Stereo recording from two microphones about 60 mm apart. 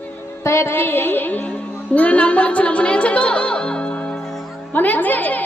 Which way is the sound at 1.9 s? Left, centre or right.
Left.